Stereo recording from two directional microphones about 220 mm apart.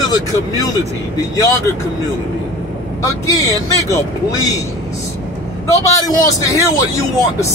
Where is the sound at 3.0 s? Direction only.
15° left (ahead or behind).